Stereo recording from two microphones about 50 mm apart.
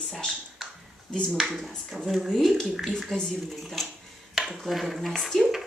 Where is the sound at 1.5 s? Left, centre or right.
Centre.